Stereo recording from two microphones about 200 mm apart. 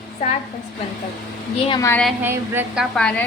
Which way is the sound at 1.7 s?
15° left (ahead or behind).